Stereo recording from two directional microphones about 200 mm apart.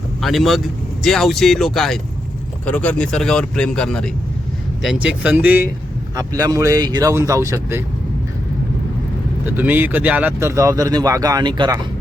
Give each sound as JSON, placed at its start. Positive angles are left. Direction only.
{"t": 0.2, "sound": "speech", "side_deg": 0}
{"t": 9.6, "sound": "speech", "side_deg": -10}